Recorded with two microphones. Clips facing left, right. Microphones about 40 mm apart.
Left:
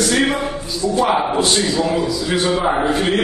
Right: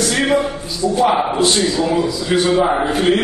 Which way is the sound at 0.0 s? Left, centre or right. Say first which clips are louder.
Left 1 dB; centre.